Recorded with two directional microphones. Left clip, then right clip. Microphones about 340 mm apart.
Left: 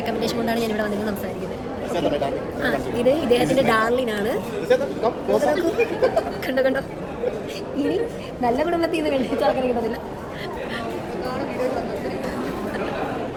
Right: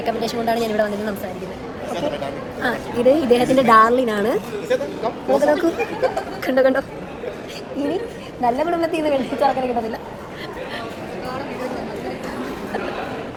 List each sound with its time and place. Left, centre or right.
0.0 s a woman's voice: centre
2.6 s a woman's voice: centre
4.7 s speech: centre
5.4 s a woman's voice: centre
8.4 s a woman's voice: centre